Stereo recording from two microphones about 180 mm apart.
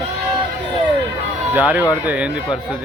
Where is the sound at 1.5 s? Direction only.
10° right (ahead or behind).